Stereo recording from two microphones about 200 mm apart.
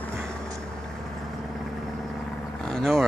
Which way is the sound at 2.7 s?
Centre (ahead or behind).